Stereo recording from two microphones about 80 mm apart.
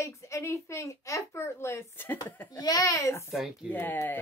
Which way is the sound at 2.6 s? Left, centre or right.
Left.